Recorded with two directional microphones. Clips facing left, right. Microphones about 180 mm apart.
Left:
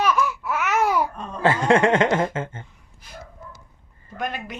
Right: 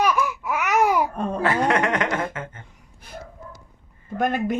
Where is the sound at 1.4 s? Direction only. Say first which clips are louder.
Left 4 dB; 25° left (ahead or behind).